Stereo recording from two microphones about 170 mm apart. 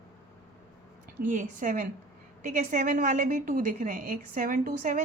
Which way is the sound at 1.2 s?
50° right (ahead or behind).